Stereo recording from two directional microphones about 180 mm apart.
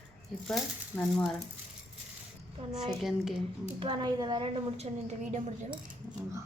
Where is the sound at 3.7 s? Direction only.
25° right (ahead or behind).